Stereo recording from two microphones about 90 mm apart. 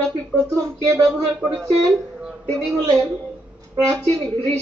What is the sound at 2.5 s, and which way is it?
Speech, 5° left (ahead or behind).